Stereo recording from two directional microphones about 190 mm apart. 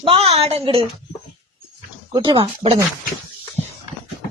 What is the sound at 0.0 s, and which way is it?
Speech, 30° right (ahead or behind).